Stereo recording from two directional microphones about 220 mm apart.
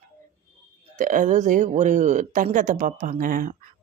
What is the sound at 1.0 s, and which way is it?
Speech, 35° right (ahead or behind).